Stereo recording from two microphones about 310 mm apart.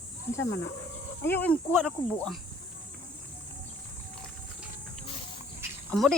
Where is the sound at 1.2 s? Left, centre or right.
Centre.